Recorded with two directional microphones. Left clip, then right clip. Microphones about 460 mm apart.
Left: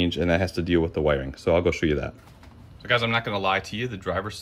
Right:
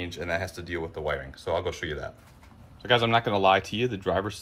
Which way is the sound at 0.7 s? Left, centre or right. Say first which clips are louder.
Left 11 dB; left.